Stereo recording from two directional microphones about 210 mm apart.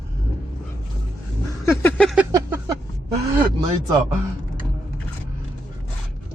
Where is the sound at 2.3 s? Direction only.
15° right (ahead or behind).